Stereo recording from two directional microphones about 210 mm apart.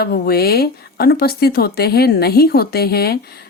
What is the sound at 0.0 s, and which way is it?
Speech, 45° left (ahead or behind).